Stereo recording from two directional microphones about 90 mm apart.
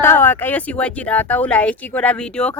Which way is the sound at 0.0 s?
25° left (ahead or behind).